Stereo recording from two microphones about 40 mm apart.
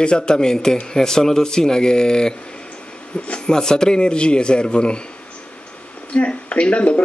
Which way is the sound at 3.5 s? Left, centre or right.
Centre.